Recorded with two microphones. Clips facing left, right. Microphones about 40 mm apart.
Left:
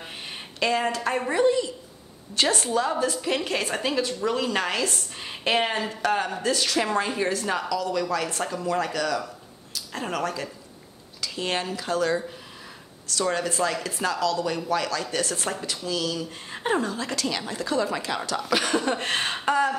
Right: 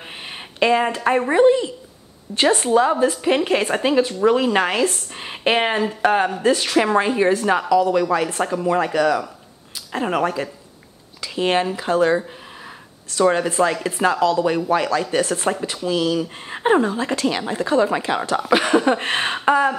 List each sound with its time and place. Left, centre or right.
0.3 s speech: right